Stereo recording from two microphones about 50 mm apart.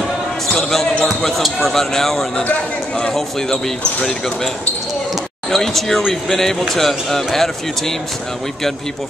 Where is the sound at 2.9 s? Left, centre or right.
Centre.